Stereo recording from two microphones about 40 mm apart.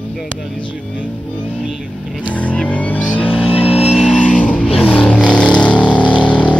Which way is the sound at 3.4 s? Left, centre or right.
Right.